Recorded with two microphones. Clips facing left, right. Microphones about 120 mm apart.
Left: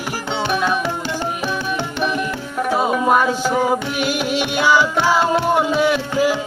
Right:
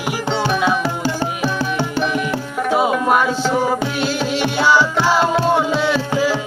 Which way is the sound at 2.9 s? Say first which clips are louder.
Even; centre (ahead or behind).